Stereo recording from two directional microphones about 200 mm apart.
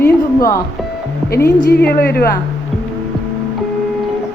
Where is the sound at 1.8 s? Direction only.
50° left (ahead or behind).